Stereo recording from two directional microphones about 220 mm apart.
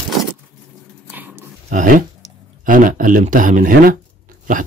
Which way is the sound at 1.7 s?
35° right (ahead or behind).